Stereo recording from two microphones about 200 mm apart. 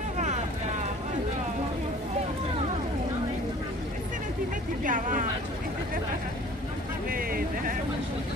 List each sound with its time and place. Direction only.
4.8 s speech: 40° right (ahead or behind)
7.1 s vehicle: 45° right (ahead or behind)